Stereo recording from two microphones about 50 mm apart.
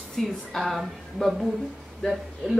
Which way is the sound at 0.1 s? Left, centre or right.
Centre.